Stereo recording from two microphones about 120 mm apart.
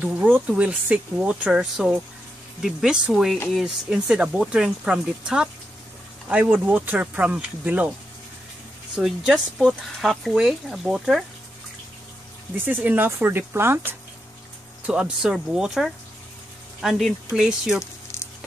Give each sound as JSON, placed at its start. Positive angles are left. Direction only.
{"t": 0.0, "sound": "speech", "side_deg": -15}
{"t": 8.9, "sound": "speech", "side_deg": -5}
{"t": 12.5, "sound": "speech", "side_deg": -15}
{"t": 14.9, "sound": "speech", "side_deg": -5}